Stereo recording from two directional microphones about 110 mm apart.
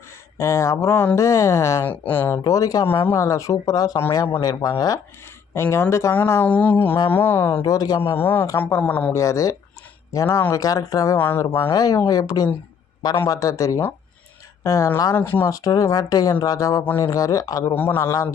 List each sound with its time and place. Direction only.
0.4 s speech: 25° left (ahead or behind)
6.1 s a sound: 20° left (ahead or behind)
7.1 s speech: 20° left (ahead or behind)
7.6 s speech: 35° left (ahead or behind)
8.0 s speech: 20° left (ahead or behind)
9.1 s speech: 30° left (ahead or behind)
11.1 s speech: 20° left (ahead or behind)
11.7 s speech: 35° left (ahead or behind)
15.1 s speech: 20° left (ahead or behind)
15.5 s speech: 30° left (ahead or behind)